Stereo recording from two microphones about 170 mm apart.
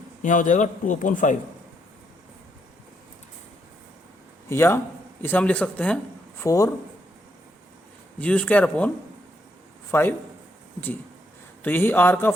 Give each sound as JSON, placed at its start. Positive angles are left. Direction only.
{"t": 0.2, "sound": "speech", "side_deg": 50}
{"t": 4.4, "sound": "a man's voice", "side_deg": 15}
{"t": 6.4, "sound": "speech", "side_deg": 20}
{"t": 8.2, "sound": "speech", "side_deg": 10}
{"t": 9.9, "sound": "speech", "side_deg": 10}
{"t": 11.6, "sound": "speech", "side_deg": 10}